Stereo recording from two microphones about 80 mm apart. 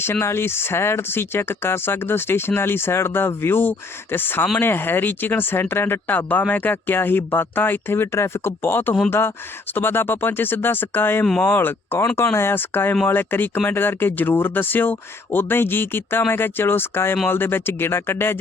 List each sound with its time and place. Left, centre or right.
0.0 s speech: left